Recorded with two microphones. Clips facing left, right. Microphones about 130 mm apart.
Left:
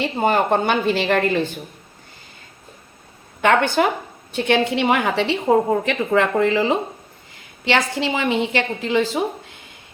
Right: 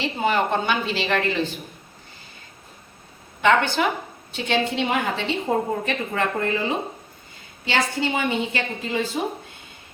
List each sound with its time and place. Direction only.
0.0 s speech: 45° left (ahead or behind)
3.4 s a woman's voice: 55° left (ahead or behind); by 5.4 s 70° left (ahead or behind)
5.8 s a woman's voice: 90° left